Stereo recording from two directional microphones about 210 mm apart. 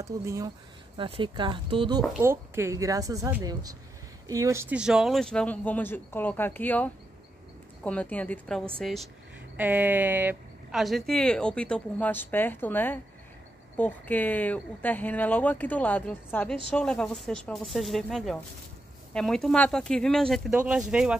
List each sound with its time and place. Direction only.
0.0 s speech: 15° right (ahead or behind)
2.1 s speech: 10° right (ahead or behind)